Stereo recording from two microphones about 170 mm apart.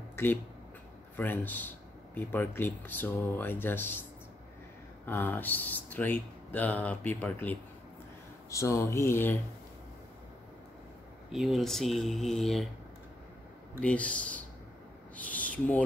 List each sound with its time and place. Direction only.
0.1 s a sound: 10° left (ahead or behind)
1.1 s speech: 10° left (ahead or behind)
5.0 s speech: 10° left (ahead or behind)
11.3 s speech: centre (ahead or behind)
13.7 s speech: 5° left (ahead or behind)